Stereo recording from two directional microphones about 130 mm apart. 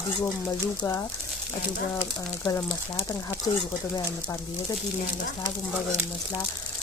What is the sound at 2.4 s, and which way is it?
Speech, 30° left (ahead or behind).